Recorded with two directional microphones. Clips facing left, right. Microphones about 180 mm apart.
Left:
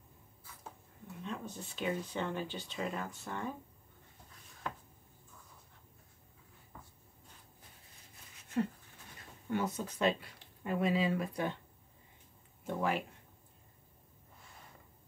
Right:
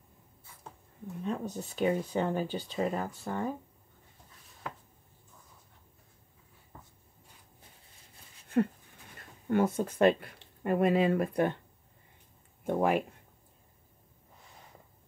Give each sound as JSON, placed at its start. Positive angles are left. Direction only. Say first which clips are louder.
{"t": 1.2, "sound": "speech", "louder": "right 8 dB", "side_deg": -40}
{"t": 9.5, "sound": "speech", "louder": "right 8 dB", "side_deg": -50}
{"t": 12.6, "sound": "speech", "louder": "right 7 dB", "side_deg": -55}